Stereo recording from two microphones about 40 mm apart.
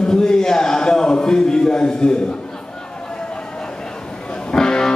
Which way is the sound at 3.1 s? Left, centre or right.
Left.